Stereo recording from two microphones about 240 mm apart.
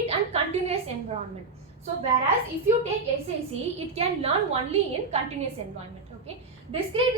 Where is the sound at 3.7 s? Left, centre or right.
Right.